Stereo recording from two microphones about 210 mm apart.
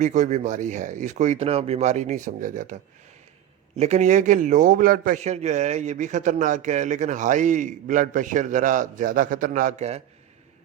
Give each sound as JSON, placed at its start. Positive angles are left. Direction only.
{"t": 0.0, "sound": "a man's voice", "side_deg": -35}
{"t": 3.8, "sound": "a man's voice", "side_deg": -30}